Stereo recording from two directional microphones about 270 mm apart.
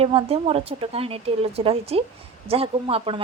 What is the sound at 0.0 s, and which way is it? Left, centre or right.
A woman's voice, right.